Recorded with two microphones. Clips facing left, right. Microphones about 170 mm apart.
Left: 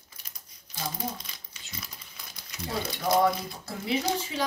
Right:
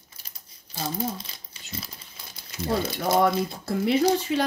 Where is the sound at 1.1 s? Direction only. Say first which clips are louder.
Right 4 dB; 30° right (ahead or behind).